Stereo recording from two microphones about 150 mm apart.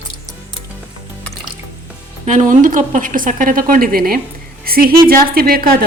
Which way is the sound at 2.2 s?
55° right (ahead or behind).